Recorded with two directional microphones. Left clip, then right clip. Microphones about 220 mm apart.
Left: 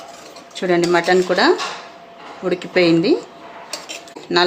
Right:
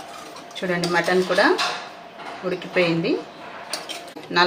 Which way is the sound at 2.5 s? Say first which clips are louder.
Left 6 dB; 40° left (ahead or behind).